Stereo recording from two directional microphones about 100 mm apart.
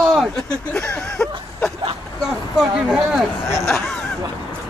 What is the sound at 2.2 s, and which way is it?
Speech, 5° right (ahead or behind).